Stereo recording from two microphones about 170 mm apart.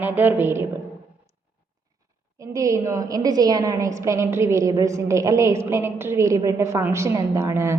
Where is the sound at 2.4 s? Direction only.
20° right (ahead or behind).